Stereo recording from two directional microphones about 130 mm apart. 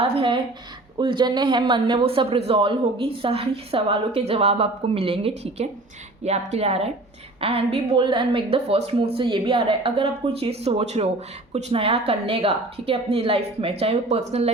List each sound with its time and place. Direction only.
0.0 s a woman's voice: 40° right (ahead or behind); by 14.5 s 55° right (ahead or behind)